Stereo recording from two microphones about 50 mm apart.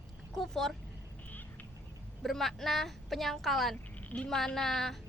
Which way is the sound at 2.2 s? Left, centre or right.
Centre.